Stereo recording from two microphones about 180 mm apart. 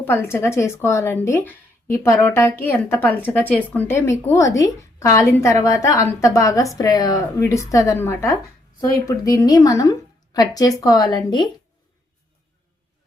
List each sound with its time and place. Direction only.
0.0 s speech: 10° left (ahead or behind)